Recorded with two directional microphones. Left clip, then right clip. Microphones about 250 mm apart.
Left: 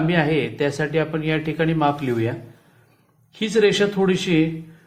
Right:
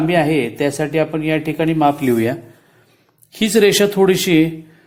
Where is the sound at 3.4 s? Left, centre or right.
Right.